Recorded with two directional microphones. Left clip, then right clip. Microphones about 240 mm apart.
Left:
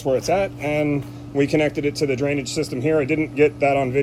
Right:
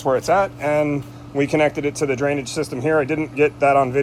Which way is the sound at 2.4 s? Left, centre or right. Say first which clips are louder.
Even; centre.